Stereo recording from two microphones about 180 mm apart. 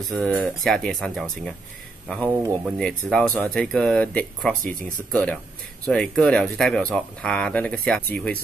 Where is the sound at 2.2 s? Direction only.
20° right (ahead or behind).